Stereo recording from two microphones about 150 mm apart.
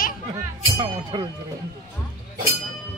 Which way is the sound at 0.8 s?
30° right (ahead or behind).